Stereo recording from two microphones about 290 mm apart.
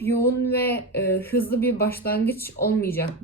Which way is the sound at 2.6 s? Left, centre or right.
Left.